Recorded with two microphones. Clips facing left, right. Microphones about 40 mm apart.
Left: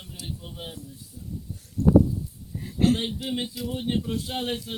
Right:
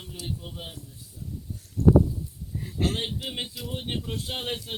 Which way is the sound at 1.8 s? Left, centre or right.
Right.